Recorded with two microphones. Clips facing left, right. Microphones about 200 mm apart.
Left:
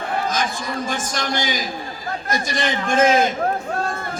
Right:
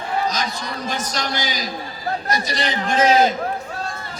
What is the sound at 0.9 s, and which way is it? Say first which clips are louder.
A man's voice: left 1 dB; 50° left (ahead or behind).